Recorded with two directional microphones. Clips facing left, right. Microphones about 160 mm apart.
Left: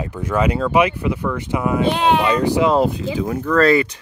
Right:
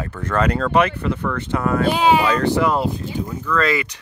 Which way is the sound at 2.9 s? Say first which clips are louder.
Left 5 dB; 75° left (ahead or behind).